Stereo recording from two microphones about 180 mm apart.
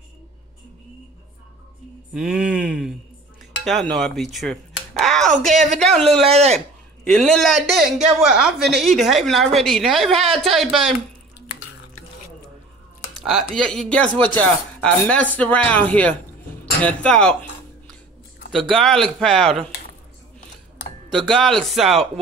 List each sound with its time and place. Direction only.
2.1 s a sound: 5° right (ahead or behind)
3.6 s speech: centre (ahead or behind)
5.0 s a sound: centre (ahead or behind)
5.4 s speech: centre (ahead or behind)
6.2 s speech: 35° right (ahead or behind)
7.1 s speech: 5° left (ahead or behind)
13.2 s speech: centre (ahead or behind)
16.8 s dishes: 5° left (ahead or behind)
18.5 s speech: centre (ahead or behind)
21.3 s speech: centre (ahead or behind)